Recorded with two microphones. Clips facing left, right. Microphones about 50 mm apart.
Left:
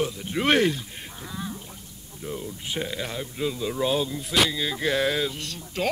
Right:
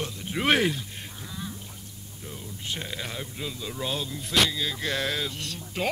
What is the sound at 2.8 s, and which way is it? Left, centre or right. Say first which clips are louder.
Speech: left 4 dB; centre.